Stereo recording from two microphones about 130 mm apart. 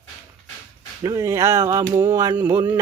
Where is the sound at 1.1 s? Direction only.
20° right (ahead or behind).